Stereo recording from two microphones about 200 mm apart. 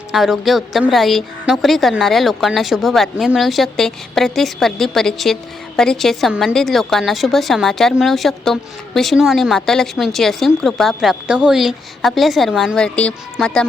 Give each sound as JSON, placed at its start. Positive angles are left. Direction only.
{"t": 0.1, "sound": "a woman's voice", "side_deg": 0}